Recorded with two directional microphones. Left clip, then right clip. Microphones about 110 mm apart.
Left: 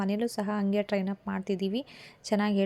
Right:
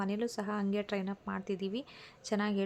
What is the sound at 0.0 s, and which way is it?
A woman's voice, 35° left (ahead or behind).